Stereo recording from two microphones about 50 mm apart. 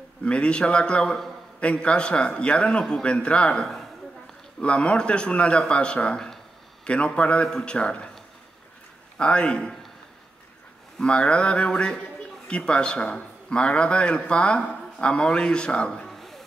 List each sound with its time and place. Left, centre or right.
0.2 s a man's voice: left
1.0 s a man's voice: centre
1.6 s a man's voice: left
9.2 s a man's voice: left
11.0 s a man's voice: centre
16.1 s a sound: centre